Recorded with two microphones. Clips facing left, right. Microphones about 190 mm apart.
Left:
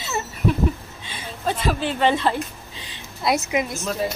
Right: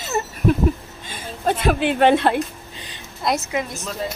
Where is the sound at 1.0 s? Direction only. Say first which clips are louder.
Right 4 dB; 45° right (ahead or behind).